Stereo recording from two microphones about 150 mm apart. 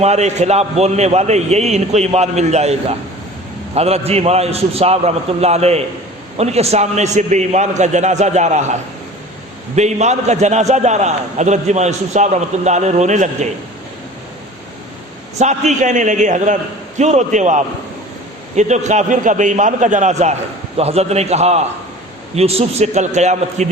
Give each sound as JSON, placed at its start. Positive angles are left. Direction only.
{"t": 0.0, "sound": "a man's voice", "side_deg": -50}
{"t": 3.8, "sound": "a man's voice", "side_deg": -45}
{"t": 15.4, "sound": "a man's voice", "side_deg": -50}